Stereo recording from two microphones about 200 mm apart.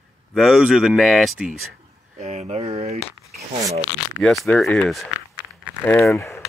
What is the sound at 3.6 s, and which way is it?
Speech, 15° right (ahead or behind).